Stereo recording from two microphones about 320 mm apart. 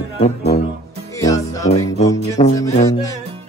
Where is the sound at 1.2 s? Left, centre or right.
Centre.